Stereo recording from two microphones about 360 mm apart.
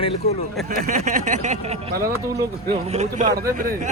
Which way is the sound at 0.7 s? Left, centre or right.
Right.